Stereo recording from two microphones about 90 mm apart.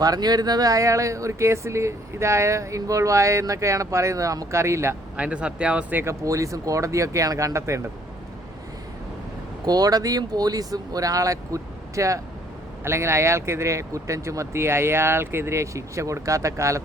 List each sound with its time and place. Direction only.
0.0 s speech: 45° right (ahead or behind); by 4.9 s 30° right (ahead or behind)
5.1 s speech: 15° right (ahead or behind)
6.0 s speech: 35° right (ahead or behind)
9.6 s speech: 45° right (ahead or behind)